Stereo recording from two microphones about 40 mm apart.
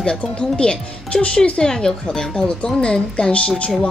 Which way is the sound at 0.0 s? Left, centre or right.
Left.